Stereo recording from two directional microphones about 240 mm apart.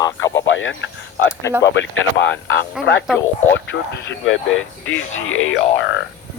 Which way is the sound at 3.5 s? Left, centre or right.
Left.